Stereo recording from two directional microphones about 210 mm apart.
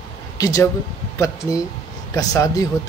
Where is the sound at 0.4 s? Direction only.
15° left (ahead or behind).